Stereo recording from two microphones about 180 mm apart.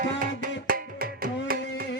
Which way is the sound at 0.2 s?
50° right (ahead or behind).